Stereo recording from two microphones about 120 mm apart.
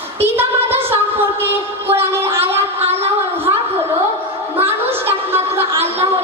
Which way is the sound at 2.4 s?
20° right (ahead or behind).